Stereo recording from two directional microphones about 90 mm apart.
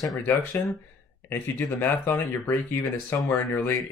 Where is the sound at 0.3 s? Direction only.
20° left (ahead or behind).